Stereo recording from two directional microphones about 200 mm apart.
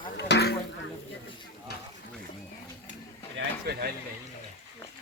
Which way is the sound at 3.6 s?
50° right (ahead or behind).